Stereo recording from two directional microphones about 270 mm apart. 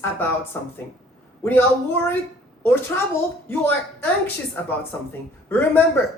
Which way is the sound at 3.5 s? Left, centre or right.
Centre.